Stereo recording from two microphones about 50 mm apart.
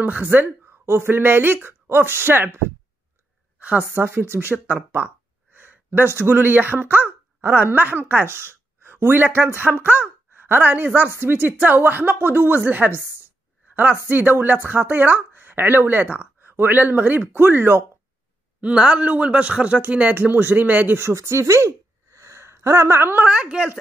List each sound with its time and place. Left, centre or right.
0.0 s speech: right
0.7 s speech: right
3.5 s a sound: right
3.9 s speech: right
14.0 s speech: right
18.6 s a man's voice: right
20.2 s speech: right
21.1 s speech: right
23.2 s a man's voice: right